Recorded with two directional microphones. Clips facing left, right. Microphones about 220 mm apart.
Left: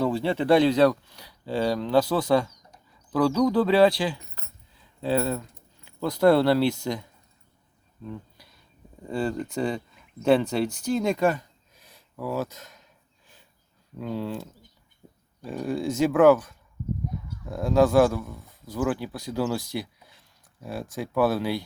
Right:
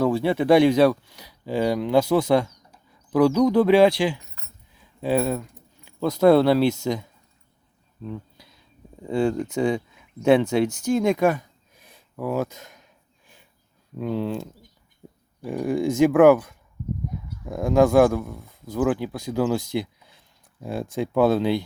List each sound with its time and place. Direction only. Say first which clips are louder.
0.2 s speech: right 3 dB; 10° right (ahead or behind)
9.0 s speech: right 5 dB; 10° right (ahead or behind)
11.9 s a sound: right 4 dB; 15° right (ahead or behind)
14.0 s speech: right 4 dB; 20° right (ahead or behind)
16.0 s speech: right 3 dB; 10° right (ahead or behind)
17.5 s speech: right 2 dB; 15° right (ahead or behind)